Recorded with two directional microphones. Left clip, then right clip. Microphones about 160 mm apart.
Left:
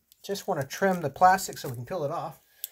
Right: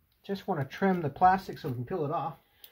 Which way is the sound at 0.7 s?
55° left (ahead or behind).